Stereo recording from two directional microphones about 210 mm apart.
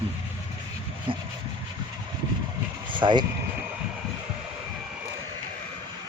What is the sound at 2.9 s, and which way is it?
Vehicle, 25° right (ahead or behind).